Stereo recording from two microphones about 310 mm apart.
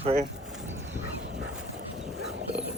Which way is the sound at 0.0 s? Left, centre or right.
Right.